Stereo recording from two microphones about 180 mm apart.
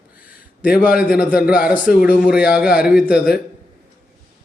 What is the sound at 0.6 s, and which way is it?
Speech, 55° left (ahead or behind).